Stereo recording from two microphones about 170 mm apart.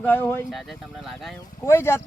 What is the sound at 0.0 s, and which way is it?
Speech, 10° left (ahead or behind).